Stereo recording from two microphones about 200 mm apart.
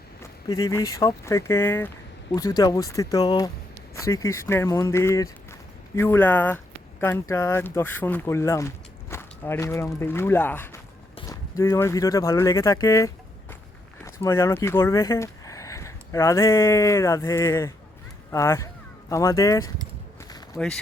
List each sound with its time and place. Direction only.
0.2 s speech: 15° left (ahead or behind)